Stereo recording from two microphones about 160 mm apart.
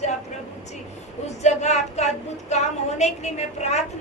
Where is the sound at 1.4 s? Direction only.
45° left (ahead or behind).